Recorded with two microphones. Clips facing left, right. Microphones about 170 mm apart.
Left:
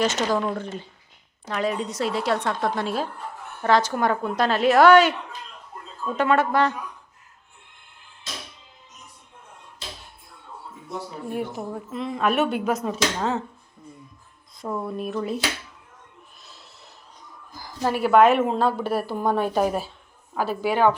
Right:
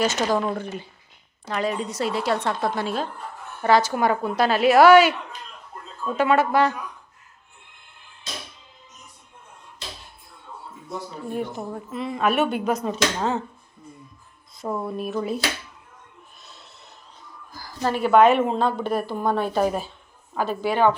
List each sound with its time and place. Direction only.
0.0 s a woman's voice: 10° right (ahead or behind)
1.5 s a woman's voice: centre (ahead or behind)
6.1 s speech: 5° right (ahead or behind)
11.3 s speech: 5° left (ahead or behind)
14.6 s speech: 5° right (ahead or behind)
17.2 s music: 20° left (ahead or behind)
17.7 s a woman's voice: 10° left (ahead or behind)